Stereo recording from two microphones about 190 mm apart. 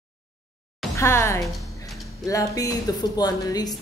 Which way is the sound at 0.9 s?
15° left (ahead or behind).